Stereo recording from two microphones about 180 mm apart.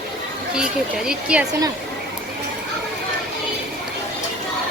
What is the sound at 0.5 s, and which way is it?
Speech, 5° right (ahead or behind).